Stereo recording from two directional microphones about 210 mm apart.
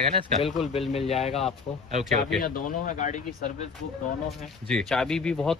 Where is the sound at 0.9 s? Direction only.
30° left (ahead or behind).